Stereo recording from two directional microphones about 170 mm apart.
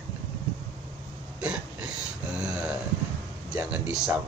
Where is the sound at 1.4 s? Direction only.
5° right (ahead or behind).